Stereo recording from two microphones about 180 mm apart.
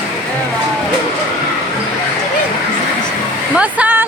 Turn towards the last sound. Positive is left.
turn(degrees=-10)  # may be behind; listen again after turning